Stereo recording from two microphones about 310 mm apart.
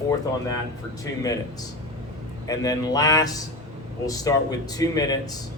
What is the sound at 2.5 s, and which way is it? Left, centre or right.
Speech, centre.